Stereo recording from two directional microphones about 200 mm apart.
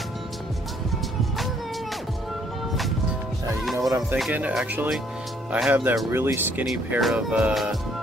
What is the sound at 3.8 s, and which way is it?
Music, 15° right (ahead or behind).